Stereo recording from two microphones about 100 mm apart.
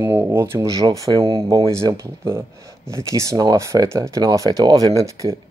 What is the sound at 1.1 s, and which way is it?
Speech, 50° right (ahead or behind).